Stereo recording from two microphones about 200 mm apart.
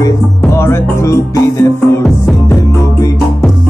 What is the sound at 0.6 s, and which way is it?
Music, 15° left (ahead or behind).